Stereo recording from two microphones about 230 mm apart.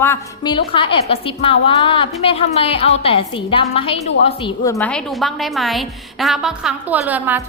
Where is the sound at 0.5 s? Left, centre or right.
Left.